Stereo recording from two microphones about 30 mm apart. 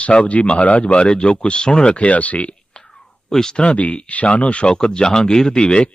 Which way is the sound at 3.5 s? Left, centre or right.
Left.